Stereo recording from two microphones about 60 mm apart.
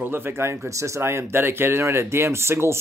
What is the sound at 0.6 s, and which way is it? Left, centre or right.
Speech, right.